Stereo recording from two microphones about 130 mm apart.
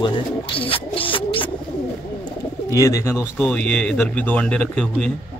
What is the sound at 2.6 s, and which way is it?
Speech, 25° left (ahead or behind).